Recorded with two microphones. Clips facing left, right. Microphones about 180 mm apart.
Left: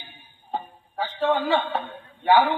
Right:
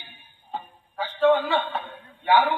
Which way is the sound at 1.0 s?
40° left (ahead or behind).